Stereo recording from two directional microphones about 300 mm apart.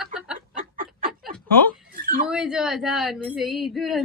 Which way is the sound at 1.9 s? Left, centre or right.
Right.